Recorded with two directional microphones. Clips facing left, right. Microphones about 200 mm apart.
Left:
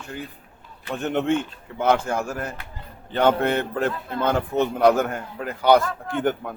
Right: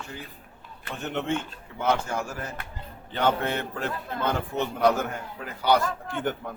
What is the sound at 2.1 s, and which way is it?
A man's voice, 55° left (ahead or behind).